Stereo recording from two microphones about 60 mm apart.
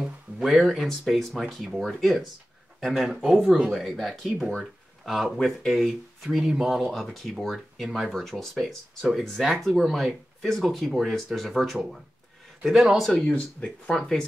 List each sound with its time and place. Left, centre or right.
0.0 s a sound: centre
0.8 s speech: centre
13.3 s speech: centre